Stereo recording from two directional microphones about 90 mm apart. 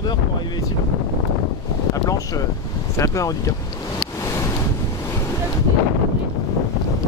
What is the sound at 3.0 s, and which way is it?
Speech, 40° left (ahead or behind).